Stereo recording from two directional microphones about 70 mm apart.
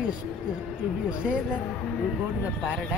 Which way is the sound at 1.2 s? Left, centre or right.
Centre.